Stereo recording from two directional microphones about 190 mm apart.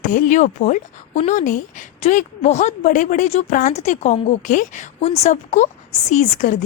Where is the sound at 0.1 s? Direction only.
40° left (ahead or behind).